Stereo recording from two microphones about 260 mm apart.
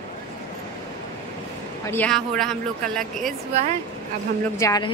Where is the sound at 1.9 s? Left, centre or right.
Centre.